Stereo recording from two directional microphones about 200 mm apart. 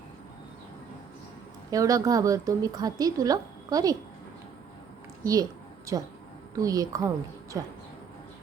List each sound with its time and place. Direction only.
1.7 s a woman's voice: 15° right (ahead or behind)
5.2 s a sound: 15° right (ahead or behind)
6.6 s a woman's voice: 20° right (ahead or behind)